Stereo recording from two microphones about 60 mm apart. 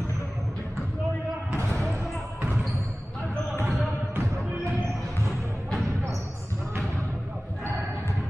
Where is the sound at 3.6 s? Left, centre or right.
Right.